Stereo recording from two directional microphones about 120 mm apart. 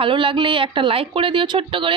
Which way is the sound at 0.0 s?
45° right (ahead or behind).